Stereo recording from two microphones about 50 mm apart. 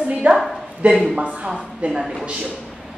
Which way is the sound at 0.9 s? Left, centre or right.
Centre.